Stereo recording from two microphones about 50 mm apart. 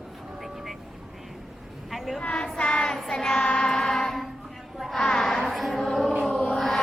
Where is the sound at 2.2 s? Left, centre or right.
Centre.